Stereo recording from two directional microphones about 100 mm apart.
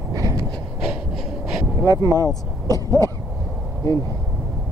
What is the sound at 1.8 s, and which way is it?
Speech, 35° right (ahead or behind).